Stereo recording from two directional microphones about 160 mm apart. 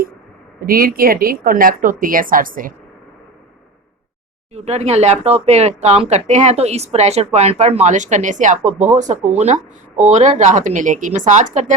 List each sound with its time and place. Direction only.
0.6 s a woman's voice: 65° right (ahead or behind)
4.5 s speech: 40° right (ahead or behind)